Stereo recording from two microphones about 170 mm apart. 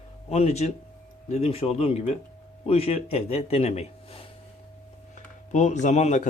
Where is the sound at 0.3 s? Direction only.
40° left (ahead or behind).